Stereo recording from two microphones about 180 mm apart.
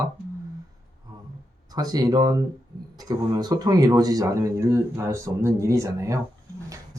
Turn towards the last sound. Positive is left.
turn(degrees=-15)  # may be behind; listen again after turning